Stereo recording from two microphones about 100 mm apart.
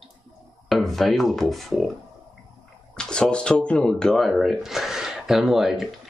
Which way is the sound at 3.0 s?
10° left (ahead or behind).